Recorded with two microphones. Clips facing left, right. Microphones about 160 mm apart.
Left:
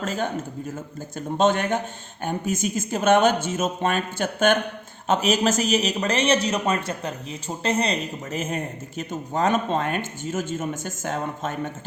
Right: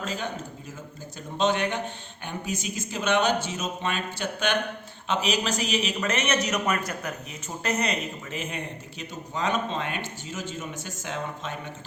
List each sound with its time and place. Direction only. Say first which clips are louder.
0.0 s a man's voice: left 6 dB; 50° left (ahead or behind)
1.4 s a man's voice: left 4 dB; 50° left (ahead or behind)